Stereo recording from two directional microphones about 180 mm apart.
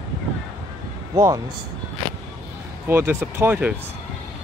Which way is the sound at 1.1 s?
20° right (ahead or behind).